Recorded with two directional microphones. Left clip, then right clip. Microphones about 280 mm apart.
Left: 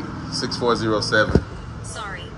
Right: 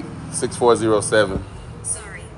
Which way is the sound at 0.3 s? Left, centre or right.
Centre.